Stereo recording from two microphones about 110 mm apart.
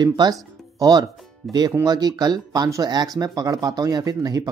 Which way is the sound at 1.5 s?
40° right (ahead or behind).